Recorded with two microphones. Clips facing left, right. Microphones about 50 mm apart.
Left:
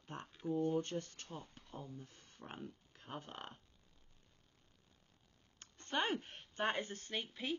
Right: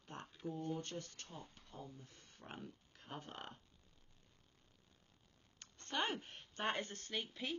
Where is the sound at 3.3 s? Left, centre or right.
Centre.